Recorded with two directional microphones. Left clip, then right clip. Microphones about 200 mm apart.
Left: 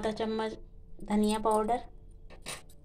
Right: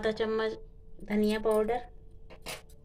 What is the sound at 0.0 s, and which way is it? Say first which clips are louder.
A woman's voice: right 3 dB; centre (ahead or behind).